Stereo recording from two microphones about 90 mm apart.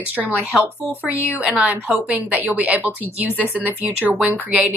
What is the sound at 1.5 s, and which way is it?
A woman's voice, 15° right (ahead or behind).